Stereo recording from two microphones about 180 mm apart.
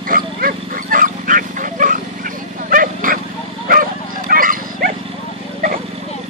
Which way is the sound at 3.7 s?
50° right (ahead or behind).